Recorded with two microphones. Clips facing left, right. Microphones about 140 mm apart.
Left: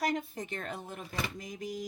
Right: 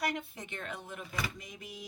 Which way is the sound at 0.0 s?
40° left (ahead or behind).